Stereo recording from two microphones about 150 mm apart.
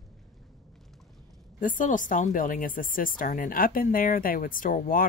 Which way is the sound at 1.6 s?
60° left (ahead or behind).